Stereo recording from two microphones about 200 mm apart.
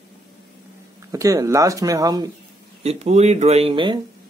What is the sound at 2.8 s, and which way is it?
Speech, 35° right (ahead or behind).